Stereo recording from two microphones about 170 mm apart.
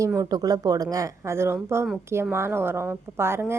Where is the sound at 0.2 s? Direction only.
20° right (ahead or behind).